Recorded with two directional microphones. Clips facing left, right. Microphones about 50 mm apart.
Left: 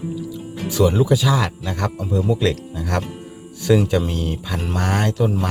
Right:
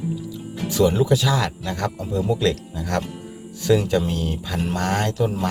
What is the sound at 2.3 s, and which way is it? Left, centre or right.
Speech, centre.